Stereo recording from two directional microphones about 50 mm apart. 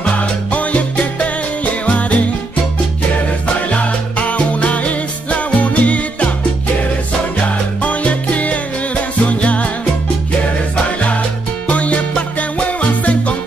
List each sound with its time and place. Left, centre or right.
0.5 s music: left
3.7 s music: left
7.8 s music: left
11.6 s music: left